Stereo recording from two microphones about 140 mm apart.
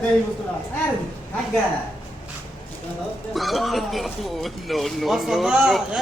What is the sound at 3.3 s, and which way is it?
A man's voice, centre (ahead or behind).